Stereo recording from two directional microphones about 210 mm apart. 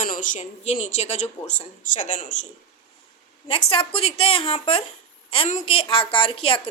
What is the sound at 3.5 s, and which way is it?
A woman's voice, 25° left (ahead or behind).